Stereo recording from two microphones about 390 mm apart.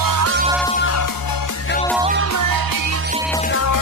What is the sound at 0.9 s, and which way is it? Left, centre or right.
Music, left.